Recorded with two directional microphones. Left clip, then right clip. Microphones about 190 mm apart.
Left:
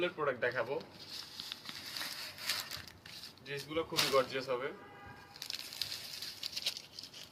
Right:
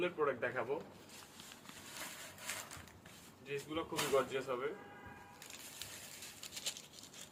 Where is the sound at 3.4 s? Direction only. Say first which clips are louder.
Left 3 dB; 15° right (ahead or behind).